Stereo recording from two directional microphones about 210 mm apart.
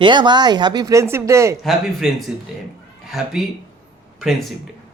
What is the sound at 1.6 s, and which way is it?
A man's voice, centre (ahead or behind).